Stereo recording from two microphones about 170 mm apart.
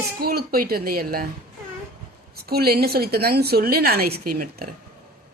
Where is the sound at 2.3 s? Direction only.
65° right (ahead or behind).